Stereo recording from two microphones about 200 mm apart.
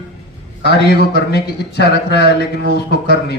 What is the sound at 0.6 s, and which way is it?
A man's voice, 55° left (ahead or behind).